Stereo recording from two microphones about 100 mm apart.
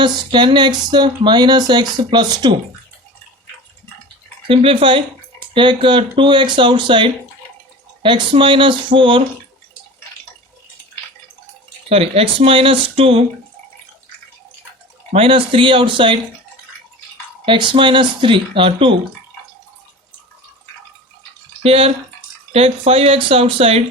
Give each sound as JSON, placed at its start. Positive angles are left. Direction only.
{"t": 0.0, "sound": "speech", "side_deg": -50}
{"t": 4.4, "sound": "speech", "side_deg": -65}
{"t": 11.9, "sound": "speech", "side_deg": -80}
{"t": 15.1, "sound": "speech", "side_deg": -65}
{"t": 17.4, "sound": "speech", "side_deg": -55}
{"t": 21.6, "sound": "speech", "side_deg": -80}